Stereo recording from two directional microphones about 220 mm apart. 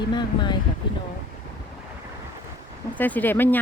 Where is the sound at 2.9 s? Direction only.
10° left (ahead or behind).